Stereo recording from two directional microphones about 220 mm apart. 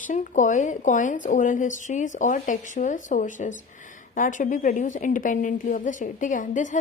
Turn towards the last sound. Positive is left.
turn(degrees=35)  # may be behind; listen again after turning